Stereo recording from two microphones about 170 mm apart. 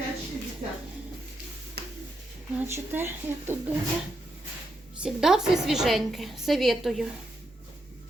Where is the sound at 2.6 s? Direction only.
10° right (ahead or behind).